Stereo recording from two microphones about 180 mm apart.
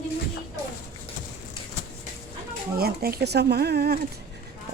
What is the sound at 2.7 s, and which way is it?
Speech, 55° right (ahead or behind).